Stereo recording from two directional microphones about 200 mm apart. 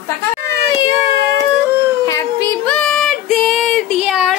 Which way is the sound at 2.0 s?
15° left (ahead or behind).